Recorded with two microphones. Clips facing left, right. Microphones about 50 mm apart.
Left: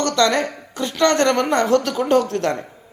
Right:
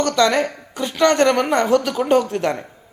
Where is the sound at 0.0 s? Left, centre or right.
Centre.